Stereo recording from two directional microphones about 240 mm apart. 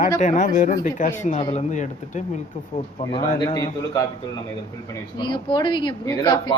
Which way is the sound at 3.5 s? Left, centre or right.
Centre.